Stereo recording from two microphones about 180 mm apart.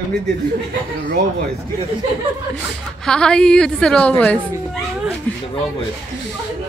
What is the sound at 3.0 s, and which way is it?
A woman's voice, 5° left (ahead or behind).